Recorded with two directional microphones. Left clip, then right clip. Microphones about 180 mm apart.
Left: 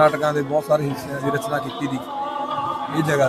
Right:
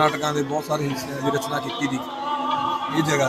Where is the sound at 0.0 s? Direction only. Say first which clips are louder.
Left 4 dB; 30° left (ahead or behind).